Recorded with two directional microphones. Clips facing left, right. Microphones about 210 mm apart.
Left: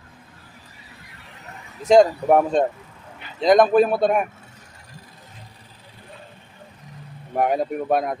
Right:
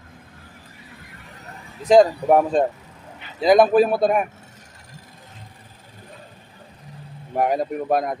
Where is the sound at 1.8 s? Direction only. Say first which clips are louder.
Even; centre (ahead or behind).